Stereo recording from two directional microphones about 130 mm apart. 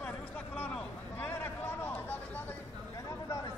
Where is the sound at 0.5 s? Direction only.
10° left (ahead or behind).